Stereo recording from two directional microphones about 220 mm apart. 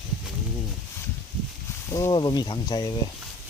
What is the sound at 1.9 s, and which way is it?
Speech, 15° left (ahead or behind).